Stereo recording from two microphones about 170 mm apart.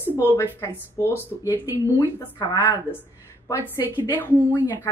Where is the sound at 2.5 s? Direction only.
20° left (ahead or behind).